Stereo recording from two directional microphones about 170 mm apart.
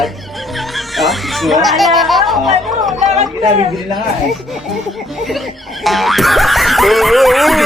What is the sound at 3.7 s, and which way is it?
Speech, centre (ahead or behind).